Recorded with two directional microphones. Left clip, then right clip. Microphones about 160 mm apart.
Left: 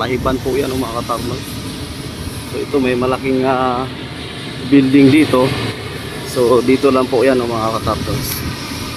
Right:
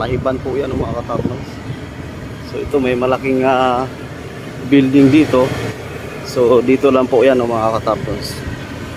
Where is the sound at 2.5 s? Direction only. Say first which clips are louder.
Even; 5° right (ahead or behind).